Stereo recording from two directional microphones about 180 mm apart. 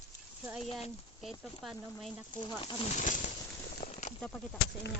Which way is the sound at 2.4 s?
25° left (ahead or behind).